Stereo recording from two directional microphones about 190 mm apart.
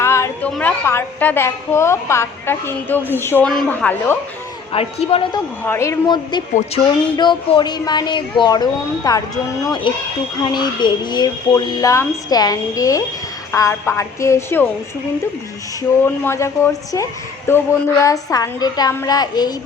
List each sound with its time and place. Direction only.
0.0 s a sound: 15° left (ahead or behind)
0.5 s a woman's voice: 10° left (ahead or behind)
4.7 s speech: 30° left (ahead or behind)
5.6 s a woman's voice: 15° left (ahead or behind)
16.0 s a woman's voice: 15° left (ahead or behind)